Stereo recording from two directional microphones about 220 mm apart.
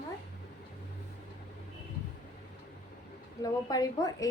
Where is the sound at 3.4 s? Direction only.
15° left (ahead or behind).